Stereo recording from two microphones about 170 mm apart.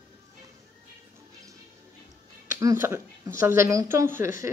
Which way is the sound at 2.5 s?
15° right (ahead or behind).